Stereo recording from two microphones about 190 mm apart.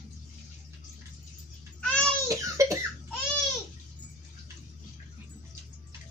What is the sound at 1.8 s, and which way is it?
Babbling, 5° left (ahead or behind).